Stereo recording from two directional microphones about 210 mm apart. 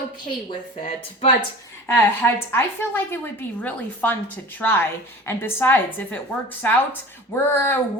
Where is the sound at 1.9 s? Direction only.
10° left (ahead or behind).